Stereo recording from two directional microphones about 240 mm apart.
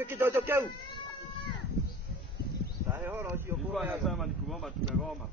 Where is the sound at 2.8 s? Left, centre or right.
Centre.